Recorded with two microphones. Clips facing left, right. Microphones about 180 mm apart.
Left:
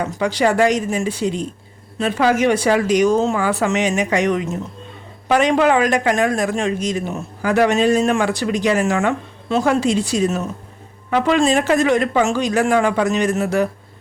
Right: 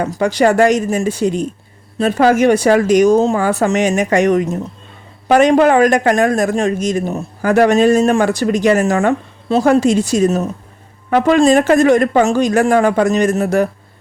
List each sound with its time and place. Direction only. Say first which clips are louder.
0.0 s speech: right 4 dB; 45° right (ahead or behind)